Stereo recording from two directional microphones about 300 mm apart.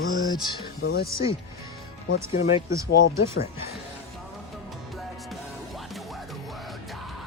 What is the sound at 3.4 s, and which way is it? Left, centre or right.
Speech, left.